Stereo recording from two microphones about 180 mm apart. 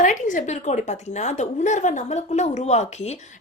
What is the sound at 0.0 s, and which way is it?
Speech, 45° left (ahead or behind).